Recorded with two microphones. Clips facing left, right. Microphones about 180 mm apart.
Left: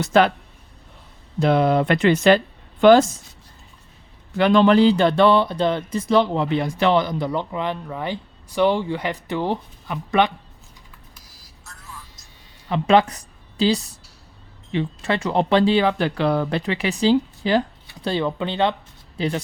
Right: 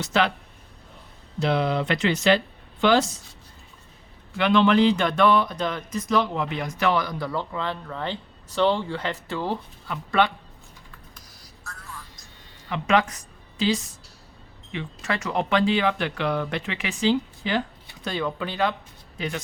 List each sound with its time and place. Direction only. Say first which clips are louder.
0.0 s speech: left 7 dB; 50° left (ahead or behind)
1.4 s speech: left 6 dB; 50° left (ahead or behind)
4.4 s speech: left 4 dB; 40° left (ahead or behind); by 10.3 s 20° left (ahead or behind)
12.6 s speech: left 6 dB; 30° left (ahead or behind)